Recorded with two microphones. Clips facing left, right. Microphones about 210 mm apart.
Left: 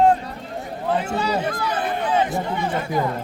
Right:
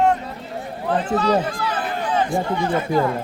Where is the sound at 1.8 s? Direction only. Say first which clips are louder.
Left 1 dB; 20° left (ahead or behind).